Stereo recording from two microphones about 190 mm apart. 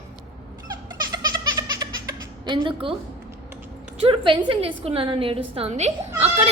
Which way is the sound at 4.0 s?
30° right (ahead or behind).